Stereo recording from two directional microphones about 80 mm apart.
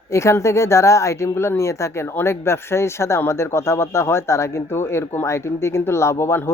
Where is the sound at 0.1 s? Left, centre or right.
Left.